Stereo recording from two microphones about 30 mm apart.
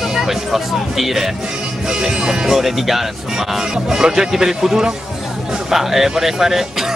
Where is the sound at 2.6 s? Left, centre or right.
Centre.